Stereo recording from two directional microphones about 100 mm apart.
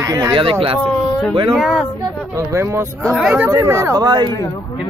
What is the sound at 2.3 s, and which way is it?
Speech, 30° right (ahead or behind).